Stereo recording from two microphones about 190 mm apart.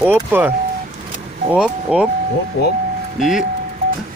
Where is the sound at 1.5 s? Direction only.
5° right (ahead or behind).